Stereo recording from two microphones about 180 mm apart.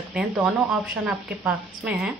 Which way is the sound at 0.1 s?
5° right (ahead or behind).